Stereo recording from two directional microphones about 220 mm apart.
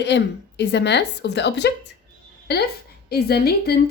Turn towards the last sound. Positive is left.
turn(degrees=45)  # may be behind; listen again after turning